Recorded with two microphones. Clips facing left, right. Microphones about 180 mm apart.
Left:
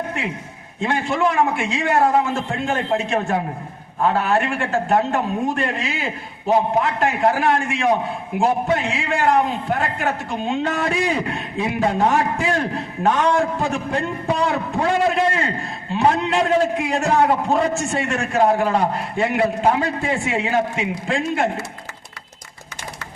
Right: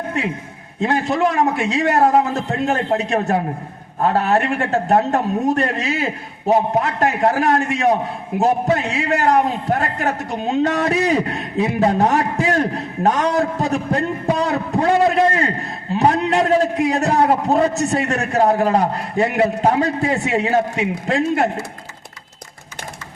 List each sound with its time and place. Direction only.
0.8 s a man's voice: 40° right (ahead or behind)